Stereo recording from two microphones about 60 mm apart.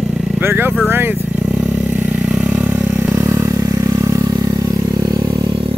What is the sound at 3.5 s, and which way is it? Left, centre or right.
Vehicle, right.